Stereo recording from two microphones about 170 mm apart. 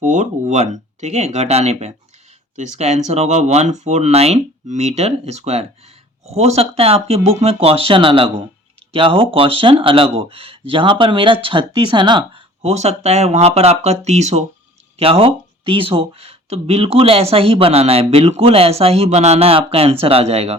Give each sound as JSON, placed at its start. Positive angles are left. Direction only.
{"t": 0.0, "sound": "speech", "side_deg": -45}